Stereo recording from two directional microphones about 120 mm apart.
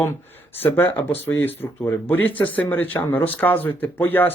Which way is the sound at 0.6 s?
15° left (ahead or behind).